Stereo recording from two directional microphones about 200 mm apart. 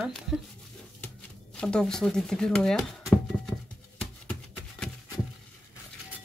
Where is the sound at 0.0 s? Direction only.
Centre (ahead or behind).